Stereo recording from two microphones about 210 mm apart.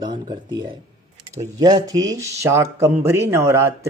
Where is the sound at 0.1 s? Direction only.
20° right (ahead or behind).